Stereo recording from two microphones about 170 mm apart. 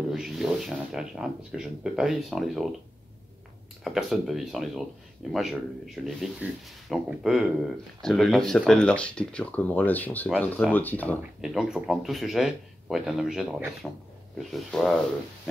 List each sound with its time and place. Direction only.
0.1 s speech: 5° right (ahead or behind)
3.8 s speech: centre (ahead or behind)
11.4 s speech: 5° right (ahead or behind)